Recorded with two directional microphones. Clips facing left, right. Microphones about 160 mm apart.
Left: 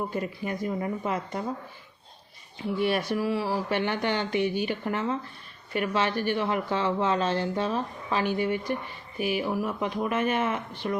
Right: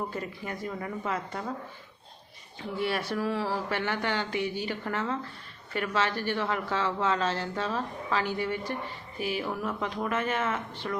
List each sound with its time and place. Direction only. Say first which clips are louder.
0.1 s speech: left 5 dB; 15° left (ahead or behind)
2.7 s speech: left 4 dB; 15° left (ahead or behind)